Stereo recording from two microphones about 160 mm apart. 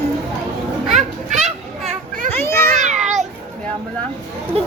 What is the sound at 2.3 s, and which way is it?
Children playing, 15° left (ahead or behind).